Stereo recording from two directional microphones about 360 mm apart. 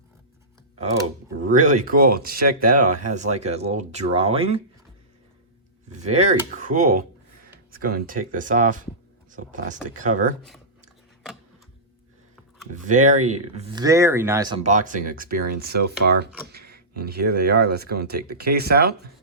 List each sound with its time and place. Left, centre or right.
1.5 s speech: right
6.0 s speech: centre
12.9 s speech: centre